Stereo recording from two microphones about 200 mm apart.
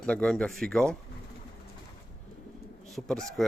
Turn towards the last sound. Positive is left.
turn(degrees=0)  # may be behind; listen again after turning